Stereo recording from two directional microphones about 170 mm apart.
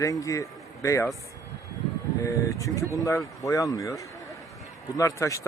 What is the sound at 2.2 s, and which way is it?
Speech, 20° left (ahead or behind).